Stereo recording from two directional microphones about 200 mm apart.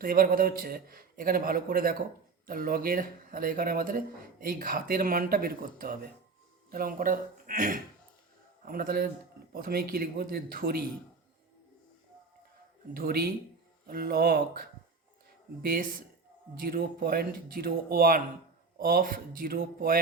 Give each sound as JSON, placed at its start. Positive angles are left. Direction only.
{"t": 0.0, "sound": "speech", "side_deg": -45}
{"t": 12.9, "sound": "speech", "side_deg": -50}